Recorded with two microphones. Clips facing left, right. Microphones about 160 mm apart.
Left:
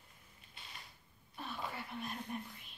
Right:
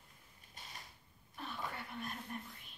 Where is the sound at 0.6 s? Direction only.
40° right (ahead or behind).